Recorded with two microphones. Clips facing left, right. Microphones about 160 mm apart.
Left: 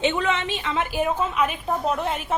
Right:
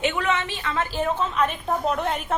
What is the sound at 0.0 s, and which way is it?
A woman's voice, 20° left (ahead or behind).